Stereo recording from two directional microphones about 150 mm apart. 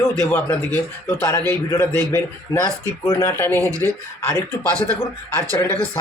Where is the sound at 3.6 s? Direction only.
20° right (ahead or behind).